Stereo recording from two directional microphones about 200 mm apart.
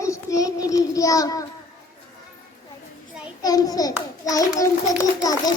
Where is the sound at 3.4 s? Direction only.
20° left (ahead or behind).